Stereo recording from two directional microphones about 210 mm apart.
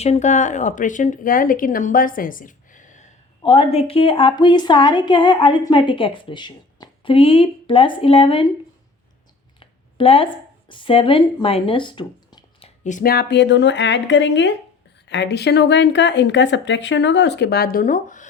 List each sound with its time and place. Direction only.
0.0 s speech: 30° left (ahead or behind)
9.6 s speech: 25° left (ahead or behind)